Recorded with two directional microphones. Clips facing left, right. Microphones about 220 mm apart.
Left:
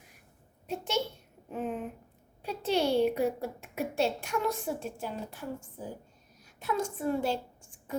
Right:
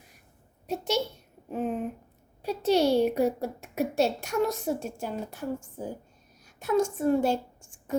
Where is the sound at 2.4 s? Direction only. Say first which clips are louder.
Right 5 dB; 40° right (ahead or behind).